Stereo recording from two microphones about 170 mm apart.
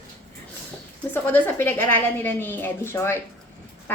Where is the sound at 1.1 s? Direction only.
10° left (ahead or behind).